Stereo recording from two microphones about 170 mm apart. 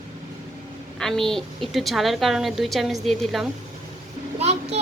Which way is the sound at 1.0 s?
Centre (ahead or behind).